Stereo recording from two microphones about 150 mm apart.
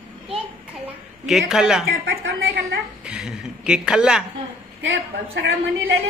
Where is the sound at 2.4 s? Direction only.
90° right.